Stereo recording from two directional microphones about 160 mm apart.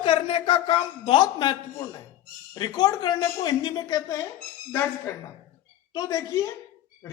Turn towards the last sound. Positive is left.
turn(degrees=20)  # may be behind; listen again after turning